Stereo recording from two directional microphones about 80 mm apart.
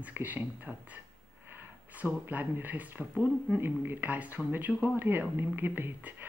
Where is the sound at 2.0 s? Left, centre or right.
Right.